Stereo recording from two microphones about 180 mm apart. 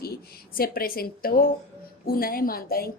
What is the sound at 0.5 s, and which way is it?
A woman's voice, 55° left (ahead or behind).